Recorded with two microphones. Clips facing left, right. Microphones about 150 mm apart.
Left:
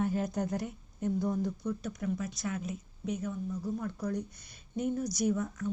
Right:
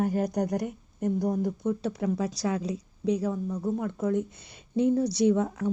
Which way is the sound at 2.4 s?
90° right.